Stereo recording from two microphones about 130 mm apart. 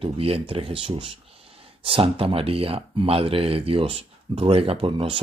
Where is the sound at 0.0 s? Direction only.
45° right (ahead or behind).